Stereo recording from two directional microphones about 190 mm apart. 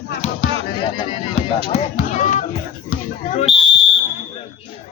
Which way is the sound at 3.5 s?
Centre (ahead or behind).